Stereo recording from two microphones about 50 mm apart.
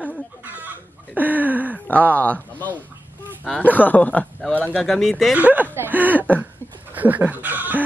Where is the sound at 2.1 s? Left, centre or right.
Left.